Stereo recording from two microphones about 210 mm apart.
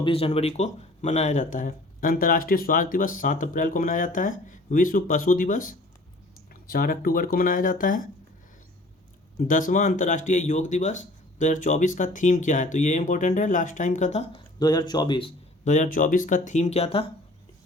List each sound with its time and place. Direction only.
0.0 s speech: 25° left (ahead or behind)
9.5 s speech: 40° left (ahead or behind)
14.6 s speech: 20° left (ahead or behind)
15.6 s speech: 35° left (ahead or behind)